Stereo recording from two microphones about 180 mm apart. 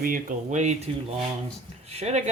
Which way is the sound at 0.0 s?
50° right (ahead or behind).